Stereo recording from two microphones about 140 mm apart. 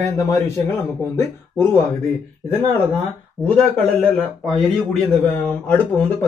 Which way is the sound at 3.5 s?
10° left (ahead or behind).